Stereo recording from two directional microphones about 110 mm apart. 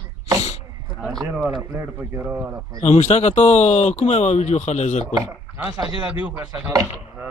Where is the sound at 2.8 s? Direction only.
90° left.